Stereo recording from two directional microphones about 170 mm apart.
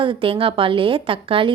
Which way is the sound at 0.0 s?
30° right (ahead or behind).